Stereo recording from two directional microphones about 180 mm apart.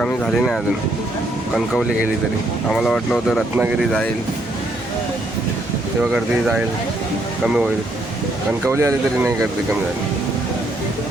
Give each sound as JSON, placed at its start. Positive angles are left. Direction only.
{"t": 0.0, "sound": "speech", "side_deg": 5}
{"t": 2.6, "sound": "speech", "side_deg": 0}
{"t": 6.0, "sound": "speech", "side_deg": -5}
{"t": 8.6, "sound": "speech", "side_deg": -15}